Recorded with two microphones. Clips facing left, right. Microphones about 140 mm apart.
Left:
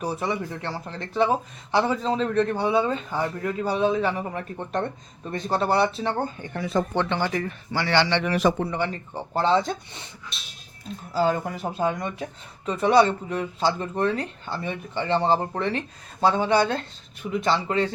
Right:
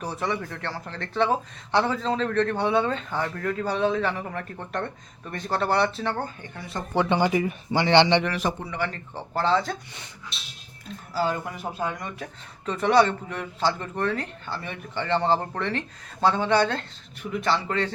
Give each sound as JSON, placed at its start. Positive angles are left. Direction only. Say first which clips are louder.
{"t": 0.0, "sound": "speech", "louder": "left 2 dB", "side_deg": 15}
{"t": 6.9, "sound": "speech", "louder": "right 3 dB", "side_deg": -10}
{"t": 8.9, "sound": "speech", "louder": "left 3 dB", "side_deg": 20}
{"t": 11.1, "sound": "speech", "louder": "left 4 dB", "side_deg": 25}
{"t": 12.6, "sound": "speech", "louder": "left 1 dB", "side_deg": 15}